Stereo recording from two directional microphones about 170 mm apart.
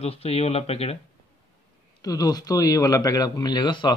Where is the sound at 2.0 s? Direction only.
20° left (ahead or behind).